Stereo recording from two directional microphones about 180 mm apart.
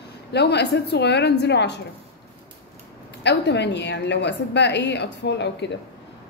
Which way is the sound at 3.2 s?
70° left (ahead or behind).